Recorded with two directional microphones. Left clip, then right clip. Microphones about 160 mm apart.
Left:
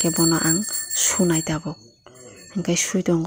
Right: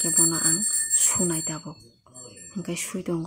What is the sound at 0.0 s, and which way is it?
Speech, 35° left (ahead or behind).